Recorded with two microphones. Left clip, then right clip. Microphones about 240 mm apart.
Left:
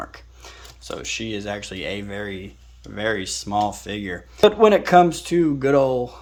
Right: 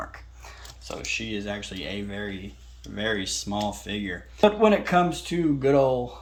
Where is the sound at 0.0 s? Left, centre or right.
Left.